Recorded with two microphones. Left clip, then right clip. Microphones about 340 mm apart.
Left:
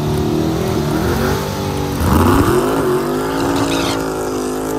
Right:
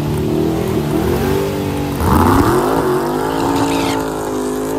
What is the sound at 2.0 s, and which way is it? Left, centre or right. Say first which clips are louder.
Vehicle: right 2 dB; centre.